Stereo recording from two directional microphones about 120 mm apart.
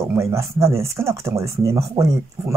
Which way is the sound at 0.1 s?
20° right (ahead or behind).